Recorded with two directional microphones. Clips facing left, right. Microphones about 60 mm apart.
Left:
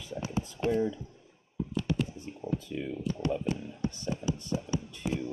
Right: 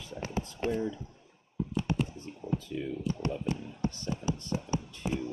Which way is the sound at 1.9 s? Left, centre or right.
Right.